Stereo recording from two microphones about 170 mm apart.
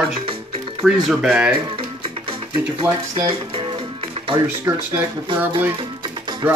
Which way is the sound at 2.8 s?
30° right (ahead or behind).